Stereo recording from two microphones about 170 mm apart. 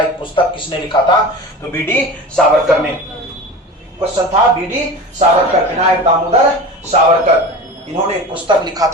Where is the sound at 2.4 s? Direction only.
5° left (ahead or behind).